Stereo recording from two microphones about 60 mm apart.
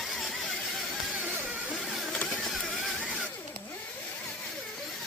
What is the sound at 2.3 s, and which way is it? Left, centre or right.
Printer, centre.